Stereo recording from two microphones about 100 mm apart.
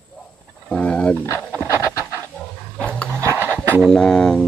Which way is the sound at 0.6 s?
10° left (ahead or behind).